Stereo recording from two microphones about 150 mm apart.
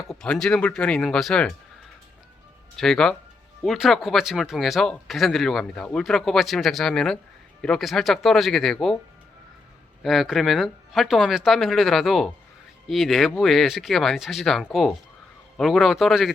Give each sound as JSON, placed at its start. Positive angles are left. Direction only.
{"t": 0.1, "sound": "speech", "side_deg": 5}
{"t": 2.7, "sound": "speech", "side_deg": 5}
{"t": 10.0, "sound": "speech", "side_deg": 0}